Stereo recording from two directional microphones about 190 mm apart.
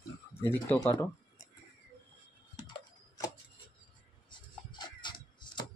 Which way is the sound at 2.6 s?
20° left (ahead or behind).